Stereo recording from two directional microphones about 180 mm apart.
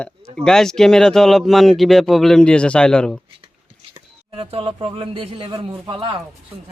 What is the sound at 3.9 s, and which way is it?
Speech, 30° right (ahead or behind).